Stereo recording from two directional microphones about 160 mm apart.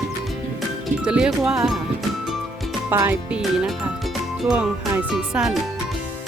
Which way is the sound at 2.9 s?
15° right (ahead or behind).